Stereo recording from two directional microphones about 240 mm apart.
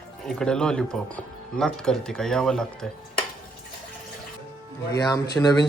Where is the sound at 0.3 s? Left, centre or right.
Centre.